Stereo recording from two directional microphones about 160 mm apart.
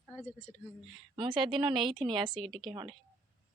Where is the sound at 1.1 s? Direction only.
30° right (ahead or behind).